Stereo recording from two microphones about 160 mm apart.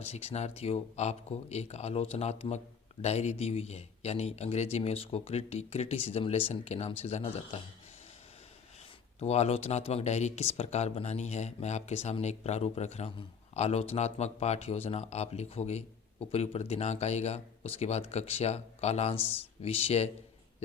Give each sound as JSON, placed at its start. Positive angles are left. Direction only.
{"t": 0.0, "sound": "speech", "side_deg": 40}
{"t": 9.2, "sound": "speech", "side_deg": 40}
{"t": 19.1, "sound": "speech", "side_deg": 15}
{"t": 19.6, "sound": "speech", "side_deg": 40}